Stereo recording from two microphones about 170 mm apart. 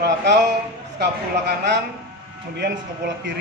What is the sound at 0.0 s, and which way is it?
Speech, 85° right.